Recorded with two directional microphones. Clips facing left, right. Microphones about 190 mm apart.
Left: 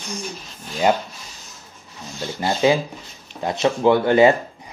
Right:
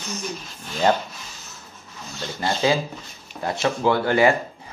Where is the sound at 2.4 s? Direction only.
20° left (ahead or behind).